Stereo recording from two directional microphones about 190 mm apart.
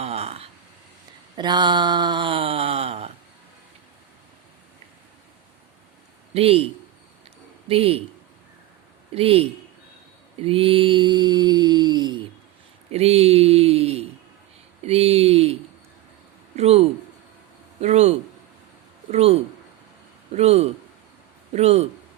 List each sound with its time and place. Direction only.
0.0 s a sound: 35° right (ahead or behind)
6.3 s speech: 30° right (ahead or behind)
7.7 s speech: 30° right (ahead or behind)
9.1 s speech: 30° right (ahead or behind)
10.4 s mantra: 30° right (ahead or behind)
12.9 s a sound: 35° right (ahead or behind)
16.6 s speech: 35° right (ahead or behind)
19.1 s speech: 35° right (ahead or behind)